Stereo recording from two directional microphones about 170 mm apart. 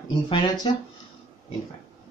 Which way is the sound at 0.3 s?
30° left (ahead or behind).